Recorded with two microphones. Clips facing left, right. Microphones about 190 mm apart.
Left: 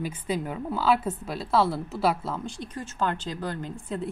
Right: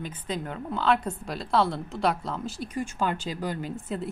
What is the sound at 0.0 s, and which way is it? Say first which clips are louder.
A woman's voice: left 3 dB; 10° left (ahead or behind).